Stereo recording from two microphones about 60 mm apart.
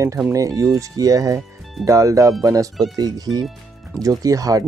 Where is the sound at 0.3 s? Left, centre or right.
Right.